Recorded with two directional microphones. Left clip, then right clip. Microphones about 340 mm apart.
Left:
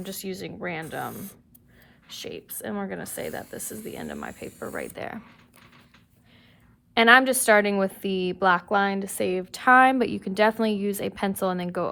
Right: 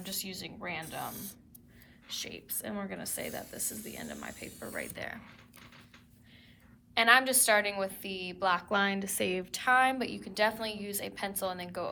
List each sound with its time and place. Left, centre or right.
0.0 s speech: centre
2.2 s speech: centre
6.9 s a woman's voice: centre